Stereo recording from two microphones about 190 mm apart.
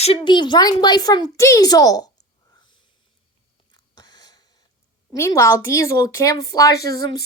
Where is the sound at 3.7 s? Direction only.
20° left (ahead or behind).